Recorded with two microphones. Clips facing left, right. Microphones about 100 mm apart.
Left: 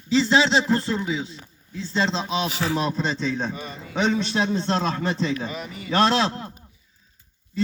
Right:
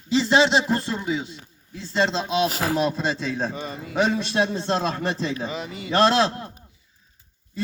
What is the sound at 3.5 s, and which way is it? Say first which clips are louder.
Speech: right 1 dB; 30° right (ahead or behind).